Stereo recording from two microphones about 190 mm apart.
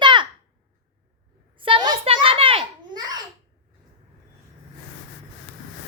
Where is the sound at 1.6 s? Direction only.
25° right (ahead or behind).